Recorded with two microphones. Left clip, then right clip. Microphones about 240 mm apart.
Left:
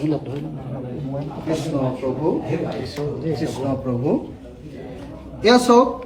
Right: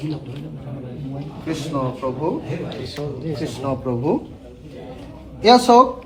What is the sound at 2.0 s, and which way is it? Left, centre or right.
Speech, centre.